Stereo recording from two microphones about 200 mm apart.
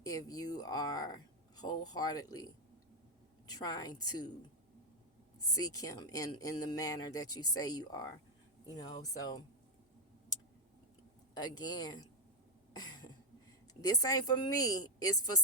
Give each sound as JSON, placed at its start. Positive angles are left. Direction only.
{"t": 0.0, "sound": "speech", "side_deg": 20}
{"t": 3.5, "sound": "speech", "side_deg": 20}
{"t": 5.5, "sound": "speech", "side_deg": 20}
{"t": 7.3, "sound": "a woman's voice", "side_deg": 90}
{"t": 7.5, "sound": "speech", "side_deg": 20}
{"t": 11.3, "sound": "speech", "side_deg": 20}
{"t": 12.7, "sound": "cough", "side_deg": 20}
{"t": 13.8, "sound": "speech", "side_deg": 20}
{"t": 15.0, "sound": "a woman's voice", "side_deg": 90}